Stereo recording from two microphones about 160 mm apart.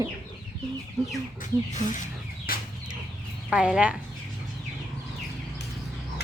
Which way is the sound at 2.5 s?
65° left (ahead or behind).